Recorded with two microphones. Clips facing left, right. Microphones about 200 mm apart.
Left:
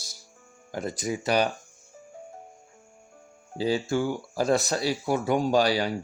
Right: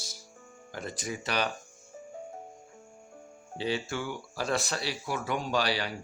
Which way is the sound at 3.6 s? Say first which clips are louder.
Left 7 dB; 40° left (ahead or behind).